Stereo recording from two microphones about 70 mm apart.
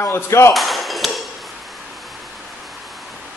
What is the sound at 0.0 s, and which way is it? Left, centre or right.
Speech, left.